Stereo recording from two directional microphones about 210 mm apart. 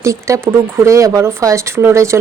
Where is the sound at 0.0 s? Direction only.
15° right (ahead or behind).